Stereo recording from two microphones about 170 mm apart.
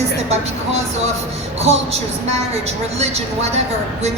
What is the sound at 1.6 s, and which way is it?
A woman's voice, 40° right (ahead or behind).